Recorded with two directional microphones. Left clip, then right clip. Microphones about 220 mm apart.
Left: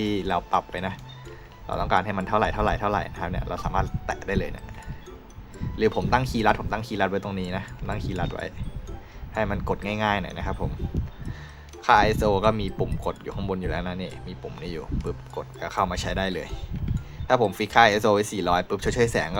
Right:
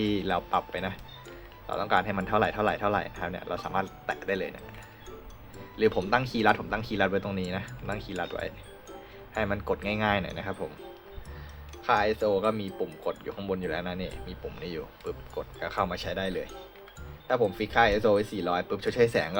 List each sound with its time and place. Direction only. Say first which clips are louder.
0.0 s speech: left 3 dB; 10° left (ahead or behind)
5.7 s speech: left 2 dB; 10° left (ahead or behind)
11.9 s speech: left 6 dB; 20° left (ahead or behind)